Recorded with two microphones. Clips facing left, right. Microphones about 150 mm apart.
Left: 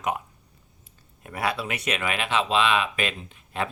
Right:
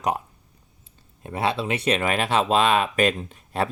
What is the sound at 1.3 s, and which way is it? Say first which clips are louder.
Speech: right 4 dB; 25° right (ahead or behind).